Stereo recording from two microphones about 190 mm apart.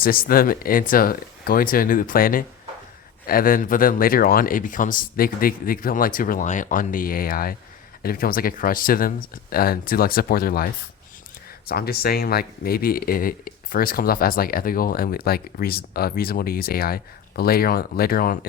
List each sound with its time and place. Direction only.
0.0 s speech: 50° left (ahead or behind)